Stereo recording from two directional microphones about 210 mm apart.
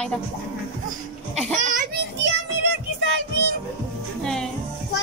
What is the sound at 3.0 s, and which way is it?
Music, 55° right (ahead or behind).